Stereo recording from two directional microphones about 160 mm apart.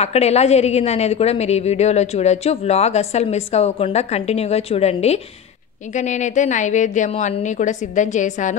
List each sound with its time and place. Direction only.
0.0 s a woman's voice: 40° left (ahead or behind)